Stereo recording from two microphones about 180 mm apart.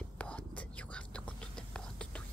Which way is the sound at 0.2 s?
5° left (ahead or behind).